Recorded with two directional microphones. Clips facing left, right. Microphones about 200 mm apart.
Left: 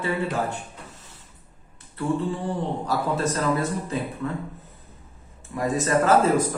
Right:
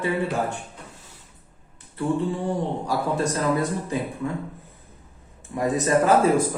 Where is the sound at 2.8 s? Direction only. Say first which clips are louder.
Right 1 dB; 10° right (ahead or behind).